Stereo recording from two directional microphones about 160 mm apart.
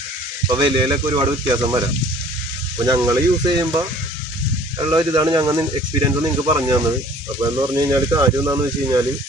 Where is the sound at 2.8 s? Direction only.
25° right (ahead or behind).